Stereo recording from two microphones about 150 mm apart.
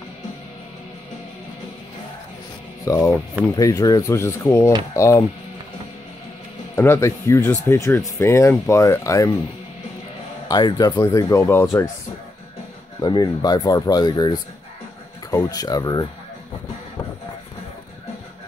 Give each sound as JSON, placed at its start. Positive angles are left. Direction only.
{"t": 2.8, "sound": "speech", "side_deg": 20}
{"t": 6.7, "sound": "speech", "side_deg": 15}
{"t": 10.5, "sound": "speech", "side_deg": 30}
{"t": 13.0, "sound": "speech", "side_deg": 30}